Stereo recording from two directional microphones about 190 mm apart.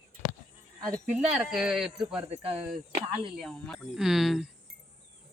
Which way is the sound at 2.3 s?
35° right (ahead or behind).